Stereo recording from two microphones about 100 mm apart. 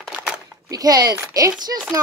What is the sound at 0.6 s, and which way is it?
Speech, 40° right (ahead or behind).